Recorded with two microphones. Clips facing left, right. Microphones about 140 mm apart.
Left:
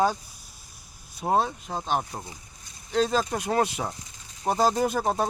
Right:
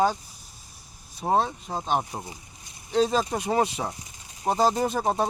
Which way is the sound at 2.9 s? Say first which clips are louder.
Right 1 dB; 5° right (ahead or behind).